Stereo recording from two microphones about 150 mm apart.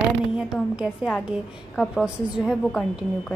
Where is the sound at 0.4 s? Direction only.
5° right (ahead or behind).